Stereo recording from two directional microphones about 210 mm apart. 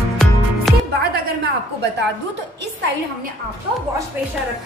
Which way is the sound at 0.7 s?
Centre (ahead or behind).